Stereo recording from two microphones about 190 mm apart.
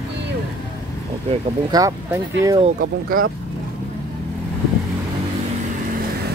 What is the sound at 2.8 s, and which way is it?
Speech, 50° right (ahead or behind).